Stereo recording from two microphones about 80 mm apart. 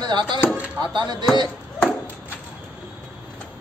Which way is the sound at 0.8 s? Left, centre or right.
Right.